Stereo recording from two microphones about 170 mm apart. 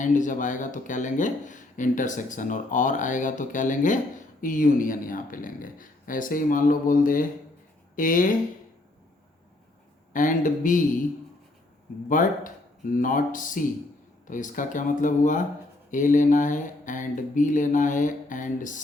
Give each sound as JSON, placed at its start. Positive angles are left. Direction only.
{"t": 0.0, "sound": "speech", "side_deg": 50}
{"t": 10.1, "sound": "speech", "side_deg": 50}
{"t": 12.0, "sound": "speech", "side_deg": 50}